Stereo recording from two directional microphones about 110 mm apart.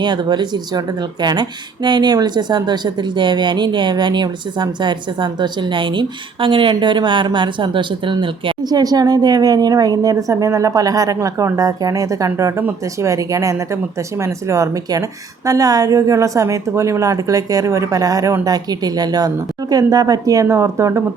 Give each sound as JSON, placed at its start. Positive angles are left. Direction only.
{"t": 0.0, "sound": "speech", "side_deg": -45}